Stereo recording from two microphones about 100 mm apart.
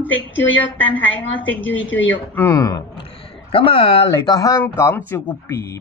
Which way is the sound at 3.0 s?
65° left (ahead or behind).